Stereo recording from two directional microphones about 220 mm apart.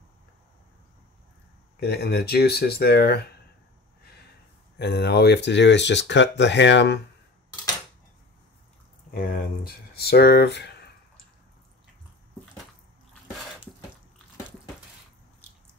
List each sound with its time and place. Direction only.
1.8 s speech: 50° left (ahead or behind)
4.7 s speech: 50° left (ahead or behind)
9.1 s speech: 45° left (ahead or behind)